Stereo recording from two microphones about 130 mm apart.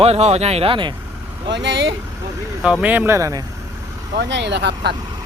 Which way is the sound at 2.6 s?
10° right (ahead or behind).